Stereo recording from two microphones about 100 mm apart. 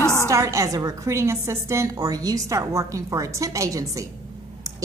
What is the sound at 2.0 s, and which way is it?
A woman's voice, 40° right (ahead or behind).